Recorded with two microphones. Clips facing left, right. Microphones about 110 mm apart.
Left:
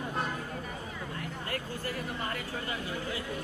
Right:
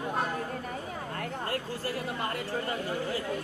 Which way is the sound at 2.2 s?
40° right (ahead or behind).